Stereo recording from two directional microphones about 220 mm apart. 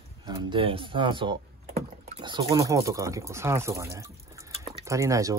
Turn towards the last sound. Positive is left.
turn(degrees=-15)  # may be behind; listen again after turning